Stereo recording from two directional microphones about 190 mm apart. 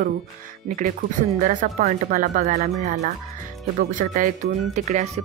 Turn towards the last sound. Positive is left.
turn(degrees=-40)  # may be behind; listen again after turning